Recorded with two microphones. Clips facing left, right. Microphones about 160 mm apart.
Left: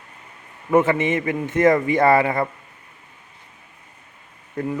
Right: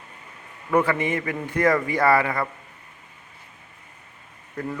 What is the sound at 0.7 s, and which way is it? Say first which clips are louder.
A man's voice: left 4 dB; 25° left (ahead or behind).